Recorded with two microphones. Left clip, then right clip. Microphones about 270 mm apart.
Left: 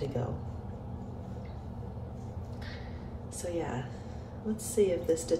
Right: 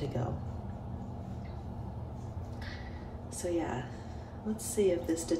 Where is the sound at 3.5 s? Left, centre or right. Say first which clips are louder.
Right 1 dB; right.